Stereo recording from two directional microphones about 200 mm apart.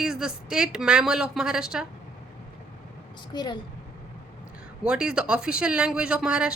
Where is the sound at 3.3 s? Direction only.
20° left (ahead or behind).